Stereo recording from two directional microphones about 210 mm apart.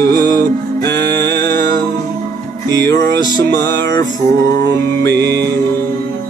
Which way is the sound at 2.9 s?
55° right (ahead or behind).